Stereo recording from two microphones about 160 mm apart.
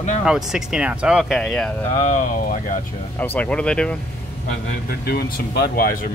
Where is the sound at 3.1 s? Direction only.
10° left (ahead or behind).